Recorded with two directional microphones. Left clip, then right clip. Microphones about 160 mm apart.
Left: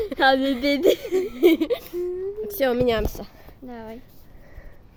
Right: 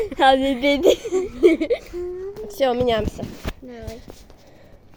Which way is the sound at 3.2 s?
40° left (ahead or behind).